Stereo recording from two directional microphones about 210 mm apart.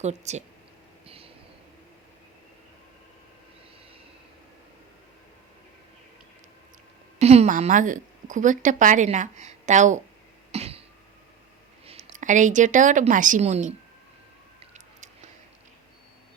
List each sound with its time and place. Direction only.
0.0 s speech: 30° right (ahead or behind)
1.0 s a sound: 25° right (ahead or behind)
7.2 s a woman's voice: 30° right (ahead or behind)
10.5 s cough: 30° right (ahead or behind)
11.9 s a woman's voice: 30° right (ahead or behind)
14.6 s a sound: 35° right (ahead or behind)